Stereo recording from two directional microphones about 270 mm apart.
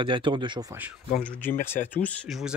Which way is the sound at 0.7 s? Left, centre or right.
Centre.